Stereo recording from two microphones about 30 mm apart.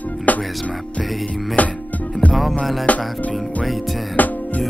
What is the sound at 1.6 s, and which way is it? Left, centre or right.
Music, left.